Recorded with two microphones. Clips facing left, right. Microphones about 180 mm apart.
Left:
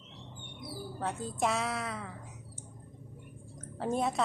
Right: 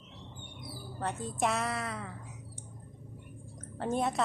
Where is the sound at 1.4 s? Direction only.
Centre (ahead or behind).